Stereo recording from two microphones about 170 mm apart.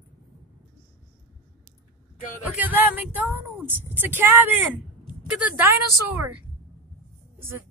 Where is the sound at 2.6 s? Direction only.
10° right (ahead or behind).